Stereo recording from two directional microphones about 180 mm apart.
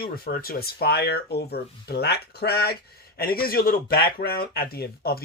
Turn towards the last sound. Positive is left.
turn(degrees=60)  # may be behind; listen again after turning